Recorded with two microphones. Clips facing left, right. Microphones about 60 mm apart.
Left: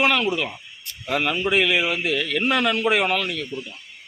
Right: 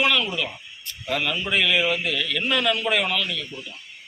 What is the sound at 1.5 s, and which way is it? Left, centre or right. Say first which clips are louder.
Speech: left 1 dB; centre.